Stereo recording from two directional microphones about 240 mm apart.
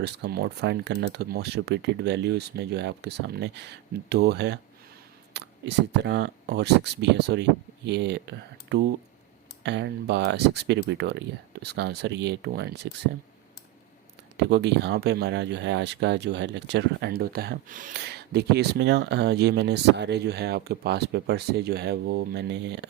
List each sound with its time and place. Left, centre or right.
0.0 s speech: right
14.3 s speech: right